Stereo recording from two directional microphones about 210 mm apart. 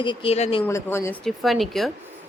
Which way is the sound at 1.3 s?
Centre (ahead or behind).